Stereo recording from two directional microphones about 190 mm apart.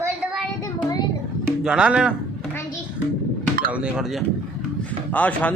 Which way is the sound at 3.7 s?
5° right (ahead or behind).